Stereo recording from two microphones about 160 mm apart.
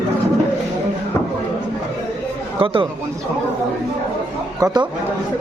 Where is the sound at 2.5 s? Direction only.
35° right (ahead or behind).